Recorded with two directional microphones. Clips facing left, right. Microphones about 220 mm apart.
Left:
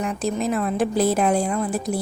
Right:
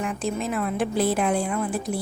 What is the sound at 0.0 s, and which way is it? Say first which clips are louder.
A woman's voice: left 3 dB; 40° left (ahead or behind).